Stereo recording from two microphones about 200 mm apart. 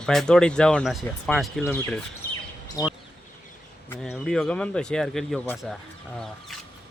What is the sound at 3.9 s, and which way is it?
Speech, 5° left (ahead or behind).